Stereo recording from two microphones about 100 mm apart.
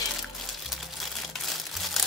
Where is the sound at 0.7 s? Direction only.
Centre (ahead or behind).